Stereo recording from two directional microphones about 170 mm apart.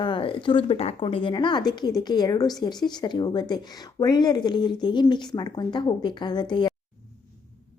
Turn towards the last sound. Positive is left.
turn(degrees=25)  # may be behind; listen again after turning